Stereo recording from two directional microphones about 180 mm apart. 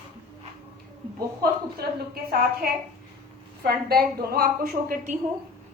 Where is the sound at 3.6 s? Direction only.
60° right (ahead or behind).